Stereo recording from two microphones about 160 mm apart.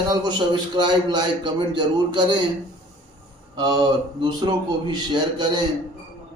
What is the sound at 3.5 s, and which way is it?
Speech, 25° right (ahead or behind).